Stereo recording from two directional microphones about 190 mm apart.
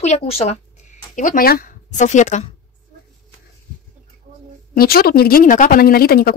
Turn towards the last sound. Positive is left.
turn(degrees=50)  # may be behind; listen again after turning